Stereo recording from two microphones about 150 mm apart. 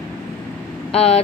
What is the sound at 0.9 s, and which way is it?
Speech, 40° left (ahead or behind).